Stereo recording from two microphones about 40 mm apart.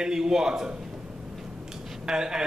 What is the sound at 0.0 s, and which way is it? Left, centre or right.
Speech, centre.